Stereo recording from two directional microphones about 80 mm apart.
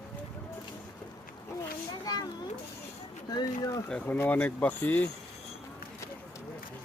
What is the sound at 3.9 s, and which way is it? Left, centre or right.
Speech, centre.